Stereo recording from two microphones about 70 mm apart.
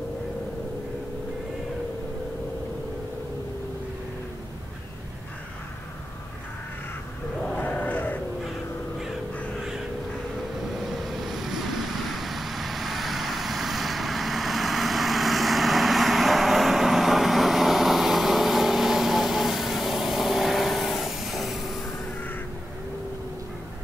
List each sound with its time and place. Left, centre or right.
7.5 s sheep: left
11.0 s vehicle: centre